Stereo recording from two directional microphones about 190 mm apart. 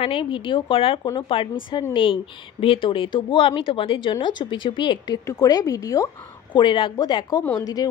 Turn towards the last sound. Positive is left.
turn(degrees=10)  # may be behind; listen again after turning